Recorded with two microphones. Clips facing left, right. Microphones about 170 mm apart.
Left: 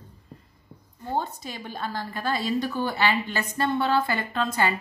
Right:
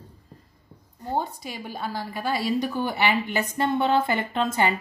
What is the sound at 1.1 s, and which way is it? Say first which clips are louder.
A woman's voice: right 1 dB; 10° right (ahead or behind).